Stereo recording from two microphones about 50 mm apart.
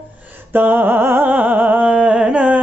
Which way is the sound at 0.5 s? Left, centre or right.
Right.